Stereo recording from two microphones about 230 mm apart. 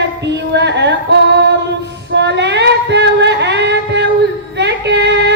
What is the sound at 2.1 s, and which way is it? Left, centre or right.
Female singing, right.